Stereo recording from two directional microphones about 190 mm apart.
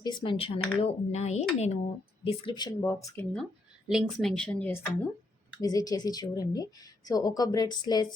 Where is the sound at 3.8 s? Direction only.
Centre (ahead or behind).